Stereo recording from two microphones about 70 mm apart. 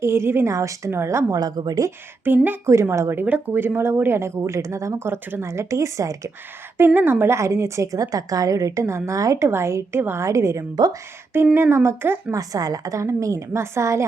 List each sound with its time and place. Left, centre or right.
0.0 s speech: right
0.5 s a woman's voice: right
0.9 s speech: right
1.4 s speech: right
2.2 s speech: right
2.9 s a woman's voice: right
3.2 s speech: right
6.7 s a woman's voice: right
10.2 s a woman's voice: right
12.3 s a woman's voice: right